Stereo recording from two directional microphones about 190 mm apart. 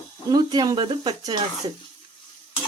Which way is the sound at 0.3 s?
20° right (ahead or behind).